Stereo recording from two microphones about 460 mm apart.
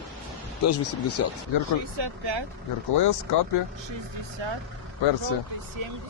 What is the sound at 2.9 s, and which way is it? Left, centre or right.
Speech, left.